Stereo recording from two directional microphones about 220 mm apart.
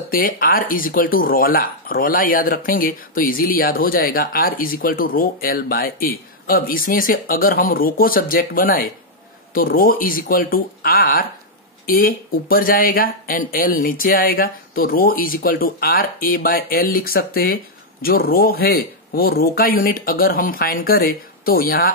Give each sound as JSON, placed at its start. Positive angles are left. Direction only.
{"t": 0.1, "sound": "speech", "side_deg": 40}